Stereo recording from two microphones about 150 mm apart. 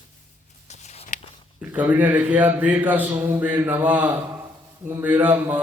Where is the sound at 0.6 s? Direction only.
50° left (ahead or behind).